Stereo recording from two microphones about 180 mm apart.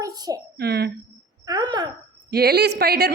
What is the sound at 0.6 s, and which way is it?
Speech, 65° right (ahead or behind).